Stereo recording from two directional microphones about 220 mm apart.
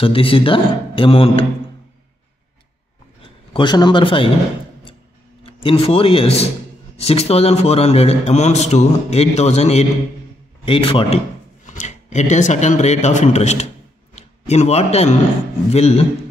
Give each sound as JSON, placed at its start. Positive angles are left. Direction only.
{"t": 0.0, "sound": "speech", "side_deg": 25}
{"t": 3.5, "sound": "speech", "side_deg": 20}
{"t": 5.4, "sound": "a man's voice", "side_deg": 25}